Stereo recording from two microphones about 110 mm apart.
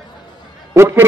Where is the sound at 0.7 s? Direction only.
20° right (ahead or behind).